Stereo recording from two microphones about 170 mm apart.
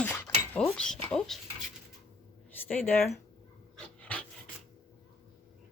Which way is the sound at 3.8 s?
5° left (ahead or behind).